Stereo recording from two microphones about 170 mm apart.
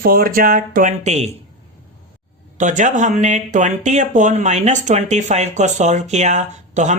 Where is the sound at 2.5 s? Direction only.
45° right (ahead or behind).